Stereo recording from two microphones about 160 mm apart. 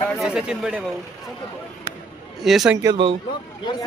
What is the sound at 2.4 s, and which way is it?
Speech, centre (ahead or behind).